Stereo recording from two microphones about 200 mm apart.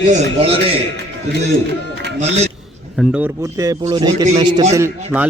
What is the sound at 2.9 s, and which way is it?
A man's voice, 5° right (ahead or behind).